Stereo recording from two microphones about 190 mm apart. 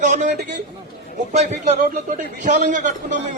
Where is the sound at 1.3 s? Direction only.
40° right (ahead or behind).